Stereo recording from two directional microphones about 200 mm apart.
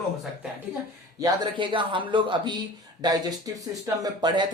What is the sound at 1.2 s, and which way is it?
Speech, 20° right (ahead or behind).